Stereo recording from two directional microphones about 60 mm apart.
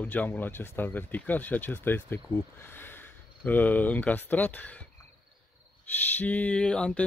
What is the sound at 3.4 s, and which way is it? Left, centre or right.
Speech, left.